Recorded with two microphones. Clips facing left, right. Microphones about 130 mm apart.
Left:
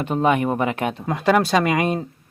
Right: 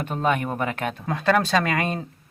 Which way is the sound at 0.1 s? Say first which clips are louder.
Left 5 dB; 10° left (ahead or behind).